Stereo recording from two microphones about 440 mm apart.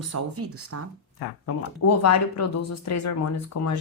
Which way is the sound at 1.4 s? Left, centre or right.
Left.